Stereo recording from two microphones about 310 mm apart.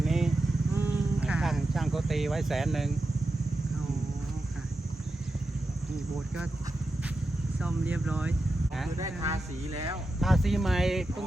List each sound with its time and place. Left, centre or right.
0.0 s vehicle: centre
0.8 s sheep: centre
7.6 s speech: centre
9.3 s speech: centre
10.2 s speech: centre